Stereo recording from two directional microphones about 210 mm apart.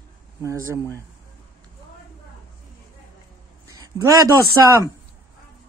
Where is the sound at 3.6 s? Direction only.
15° right (ahead or behind).